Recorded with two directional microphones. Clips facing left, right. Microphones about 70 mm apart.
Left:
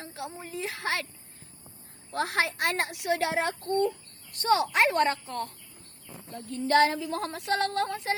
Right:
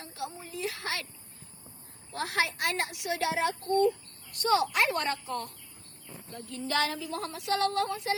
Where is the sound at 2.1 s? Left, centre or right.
Left.